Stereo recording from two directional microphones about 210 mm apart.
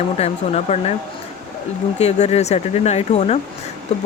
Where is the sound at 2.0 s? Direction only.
30° left (ahead or behind).